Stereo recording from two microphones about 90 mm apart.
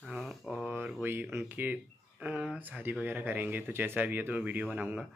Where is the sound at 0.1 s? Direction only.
Centre (ahead or behind).